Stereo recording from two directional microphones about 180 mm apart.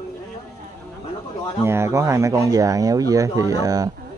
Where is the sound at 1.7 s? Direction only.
15° right (ahead or behind).